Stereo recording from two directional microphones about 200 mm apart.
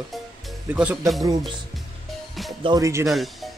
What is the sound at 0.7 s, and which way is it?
Speech, 5° right (ahead or behind).